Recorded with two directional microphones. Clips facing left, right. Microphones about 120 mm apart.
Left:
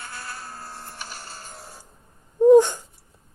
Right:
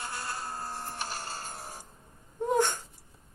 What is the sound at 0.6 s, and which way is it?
Printer, 45° right (ahead or behind).